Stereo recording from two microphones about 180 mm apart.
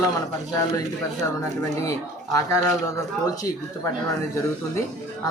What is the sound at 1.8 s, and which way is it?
Speech, 20° left (ahead or behind).